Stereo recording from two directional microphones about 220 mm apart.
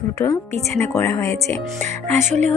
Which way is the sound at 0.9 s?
10° left (ahead or behind).